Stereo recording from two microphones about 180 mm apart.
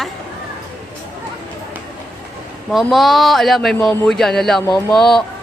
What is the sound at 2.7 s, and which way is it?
A woman's voice, centre (ahead or behind).